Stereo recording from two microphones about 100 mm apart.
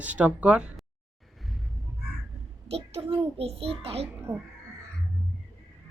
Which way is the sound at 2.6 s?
90° right.